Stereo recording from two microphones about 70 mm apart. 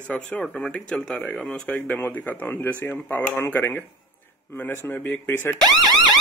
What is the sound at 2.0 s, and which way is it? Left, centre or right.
Speech, left.